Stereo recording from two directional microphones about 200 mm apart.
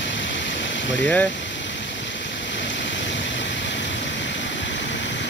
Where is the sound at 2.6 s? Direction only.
65° left (ahead or behind).